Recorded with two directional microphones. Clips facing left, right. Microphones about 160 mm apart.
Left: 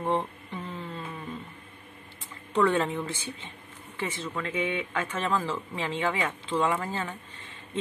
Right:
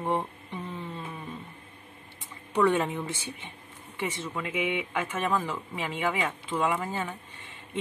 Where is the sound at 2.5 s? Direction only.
15° right (ahead or behind).